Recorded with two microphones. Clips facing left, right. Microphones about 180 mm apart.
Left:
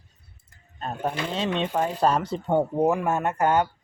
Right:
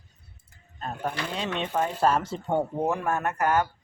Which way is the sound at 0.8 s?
25° left (ahead or behind).